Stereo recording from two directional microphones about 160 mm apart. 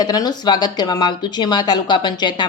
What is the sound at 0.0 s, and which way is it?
Speech, 25° left (ahead or behind).